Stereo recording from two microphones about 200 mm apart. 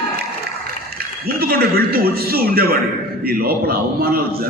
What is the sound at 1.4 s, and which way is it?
A man's voice, 50° right (ahead or behind).